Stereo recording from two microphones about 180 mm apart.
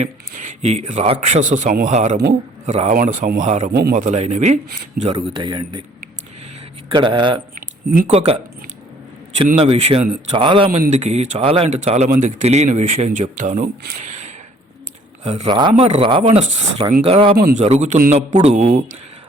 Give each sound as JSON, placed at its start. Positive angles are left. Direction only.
{"t": 0.0, "sound": "a man's voice", "side_deg": -40}
{"t": 3.7, "sound": "speech", "side_deg": -55}
{"t": 5.0, "sound": "a man's voice", "side_deg": -25}
{"t": 6.8, "sound": "a man's voice", "side_deg": -30}
{"t": 7.5, "sound": "a sound", "side_deg": -50}
{"t": 8.1, "sound": "speech", "side_deg": -35}
{"t": 9.6, "sound": "speech", "side_deg": -35}
{"t": 10.7, "sound": "speech", "side_deg": -40}
{"t": 17.3, "sound": "a man's voice", "side_deg": -50}